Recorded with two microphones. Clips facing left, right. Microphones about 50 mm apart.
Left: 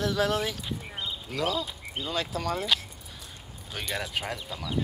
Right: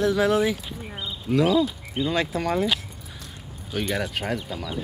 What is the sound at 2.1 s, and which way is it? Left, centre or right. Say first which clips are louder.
Speech: right 5 dB; centre.